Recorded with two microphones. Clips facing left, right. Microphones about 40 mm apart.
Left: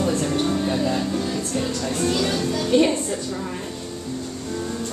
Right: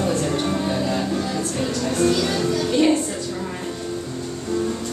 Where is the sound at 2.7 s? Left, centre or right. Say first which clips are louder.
Left 2 dB; centre.